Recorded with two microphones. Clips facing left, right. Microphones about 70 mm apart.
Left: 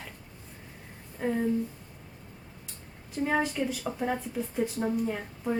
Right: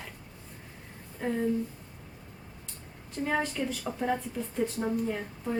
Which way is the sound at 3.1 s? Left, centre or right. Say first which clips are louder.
Left 2 dB; centre.